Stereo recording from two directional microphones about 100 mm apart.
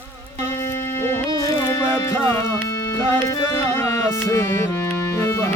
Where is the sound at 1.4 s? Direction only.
40° left (ahead or behind).